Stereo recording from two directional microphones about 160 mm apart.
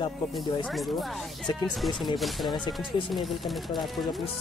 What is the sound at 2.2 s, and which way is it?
Speech, centre (ahead or behind).